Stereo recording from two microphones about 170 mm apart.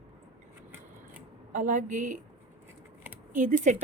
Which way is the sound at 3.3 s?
45° right (ahead or behind).